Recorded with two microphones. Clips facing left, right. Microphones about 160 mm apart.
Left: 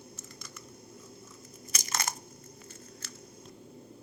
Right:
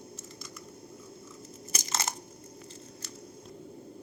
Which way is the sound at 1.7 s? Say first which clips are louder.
Right 1 dB; 25° right (ahead or behind).